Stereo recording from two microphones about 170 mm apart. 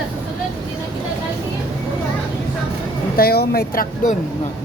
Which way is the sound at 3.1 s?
65° left (ahead or behind).